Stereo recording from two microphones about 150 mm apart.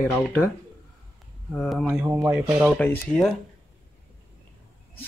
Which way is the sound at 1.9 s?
15° right (ahead or behind).